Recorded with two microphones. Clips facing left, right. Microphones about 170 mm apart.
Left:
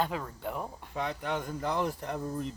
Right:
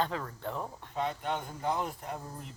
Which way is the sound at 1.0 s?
90° left.